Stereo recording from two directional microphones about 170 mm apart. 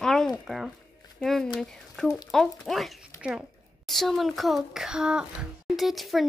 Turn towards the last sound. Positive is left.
turn(degrees=0)  # may be behind; listen again after turning